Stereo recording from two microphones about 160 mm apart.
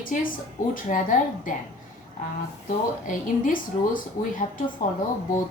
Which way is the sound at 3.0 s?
55° left (ahead or behind).